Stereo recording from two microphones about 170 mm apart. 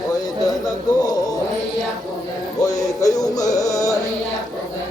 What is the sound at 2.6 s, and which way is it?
Music, 20° left (ahead or behind).